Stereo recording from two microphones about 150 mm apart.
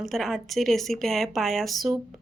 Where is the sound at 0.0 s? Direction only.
Centre (ahead or behind).